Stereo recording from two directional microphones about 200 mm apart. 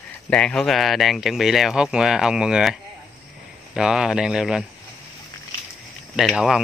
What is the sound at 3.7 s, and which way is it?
Speech, 5° right (ahead or behind).